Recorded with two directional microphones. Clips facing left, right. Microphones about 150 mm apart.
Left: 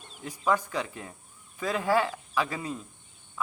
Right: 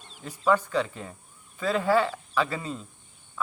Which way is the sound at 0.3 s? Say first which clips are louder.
Right 3 dB; 15° left (ahead or behind).